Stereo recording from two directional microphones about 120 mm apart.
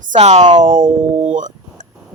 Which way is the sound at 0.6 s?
90° right.